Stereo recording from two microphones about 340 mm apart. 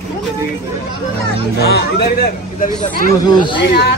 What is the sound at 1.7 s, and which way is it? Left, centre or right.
Speech, left.